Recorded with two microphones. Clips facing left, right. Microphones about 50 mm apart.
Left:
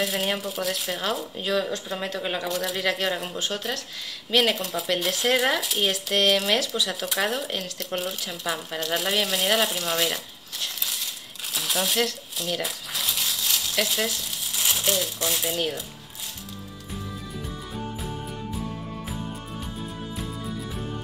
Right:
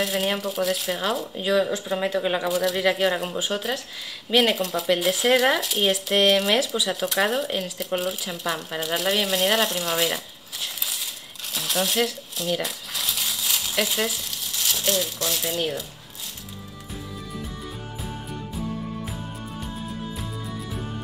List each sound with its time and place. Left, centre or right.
0.0 s speech: centre
11.5 s crumpling: centre
14.6 s crumpling: centre
15.1 s speech: centre